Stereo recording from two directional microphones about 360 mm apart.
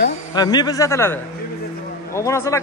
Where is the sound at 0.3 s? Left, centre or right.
Centre.